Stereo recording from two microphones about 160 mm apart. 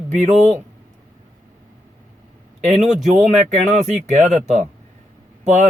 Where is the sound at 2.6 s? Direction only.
45° right (ahead or behind).